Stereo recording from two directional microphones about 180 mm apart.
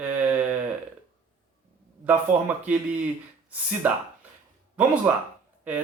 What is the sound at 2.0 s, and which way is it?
Speech, 10° right (ahead or behind).